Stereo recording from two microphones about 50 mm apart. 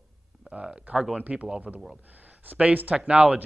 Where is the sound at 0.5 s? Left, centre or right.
Right.